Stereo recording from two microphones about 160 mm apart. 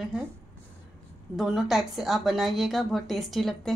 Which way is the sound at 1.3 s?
5° right (ahead or behind).